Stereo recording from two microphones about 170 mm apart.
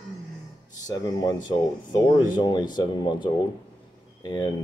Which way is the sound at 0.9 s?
25° left (ahead or behind).